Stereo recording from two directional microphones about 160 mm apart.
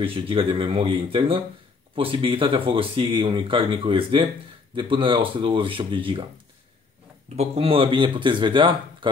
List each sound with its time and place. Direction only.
0.0 s speech: 35° right (ahead or behind)
7.3 s speech: 35° right (ahead or behind)